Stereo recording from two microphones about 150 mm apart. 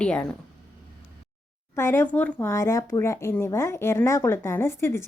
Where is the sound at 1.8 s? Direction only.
15° left (ahead or behind).